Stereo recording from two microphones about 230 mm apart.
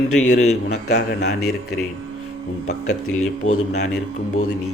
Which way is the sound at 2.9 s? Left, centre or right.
Left.